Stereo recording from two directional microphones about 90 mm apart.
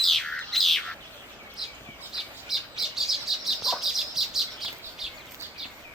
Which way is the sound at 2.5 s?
5° right (ahead or behind).